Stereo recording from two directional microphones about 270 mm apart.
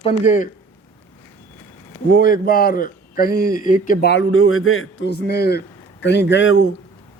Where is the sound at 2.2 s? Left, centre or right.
Left.